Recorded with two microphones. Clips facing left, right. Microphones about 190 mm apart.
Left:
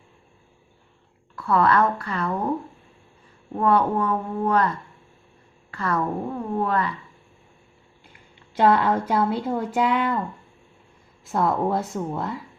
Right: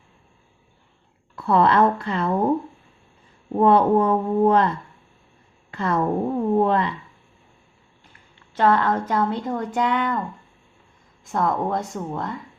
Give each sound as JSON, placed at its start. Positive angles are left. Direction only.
{"t": 1.4, "sound": "speech", "side_deg": -25}
{"t": 3.5, "sound": "speech", "side_deg": -30}
{"t": 8.5, "sound": "speech", "side_deg": 10}
{"t": 11.3, "sound": "speech", "side_deg": 5}